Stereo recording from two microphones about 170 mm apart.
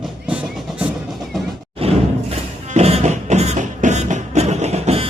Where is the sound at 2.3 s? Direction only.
40° right (ahead or behind).